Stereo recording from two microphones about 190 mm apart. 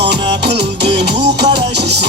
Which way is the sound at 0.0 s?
60° right (ahead or behind).